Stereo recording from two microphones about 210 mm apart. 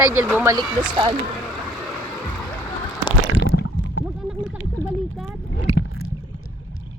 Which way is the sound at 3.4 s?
60° left (ahead or behind).